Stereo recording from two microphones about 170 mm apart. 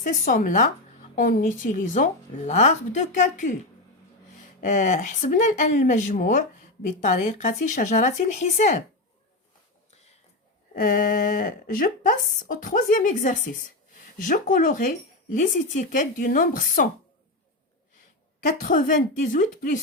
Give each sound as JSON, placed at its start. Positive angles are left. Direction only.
{"t": 0.0, "sound": "speech", "side_deg": 50}
{"t": 10.8, "sound": "speech", "side_deg": 55}
{"t": 18.6, "sound": "speech", "side_deg": 50}